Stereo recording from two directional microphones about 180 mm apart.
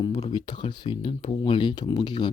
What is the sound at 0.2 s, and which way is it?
Speech, 25° left (ahead or behind).